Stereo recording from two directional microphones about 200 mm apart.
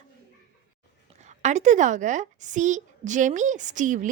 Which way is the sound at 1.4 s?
35° right (ahead or behind).